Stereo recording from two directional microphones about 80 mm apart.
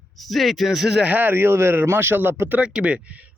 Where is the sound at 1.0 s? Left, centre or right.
Right.